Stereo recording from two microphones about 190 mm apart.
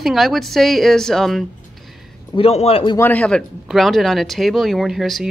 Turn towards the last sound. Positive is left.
turn(degrees=0)  # may be behind; listen again after turning